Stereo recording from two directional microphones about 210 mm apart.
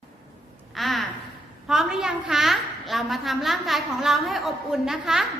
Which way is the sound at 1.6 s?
5° right (ahead or behind).